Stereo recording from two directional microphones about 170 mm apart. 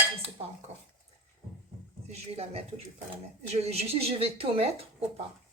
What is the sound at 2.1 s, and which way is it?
Speech, 35° right (ahead or behind).